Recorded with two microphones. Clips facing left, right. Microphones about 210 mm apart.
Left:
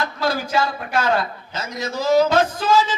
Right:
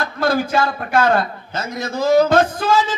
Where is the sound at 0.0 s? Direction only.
55° right (ahead or behind).